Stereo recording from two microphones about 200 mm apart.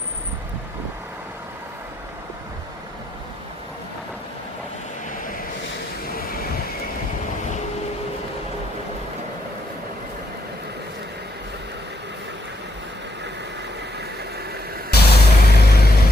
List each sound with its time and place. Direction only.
5.1 s vehicle: 40° left (ahead or behind)
14.9 s vehicle: 55° left (ahead or behind)